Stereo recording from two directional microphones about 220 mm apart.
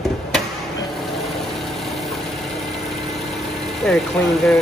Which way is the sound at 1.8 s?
Centre (ahead or behind).